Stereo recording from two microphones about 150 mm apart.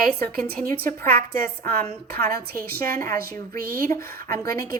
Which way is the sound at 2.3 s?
85° right.